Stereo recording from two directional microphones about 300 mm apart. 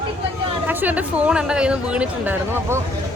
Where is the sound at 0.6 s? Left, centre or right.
Centre.